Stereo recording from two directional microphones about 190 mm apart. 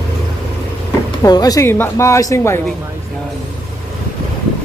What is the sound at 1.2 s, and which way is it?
A man's voice, 20° left (ahead or behind).